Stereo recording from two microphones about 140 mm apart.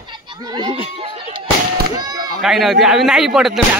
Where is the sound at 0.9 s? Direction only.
40° right (ahead or behind).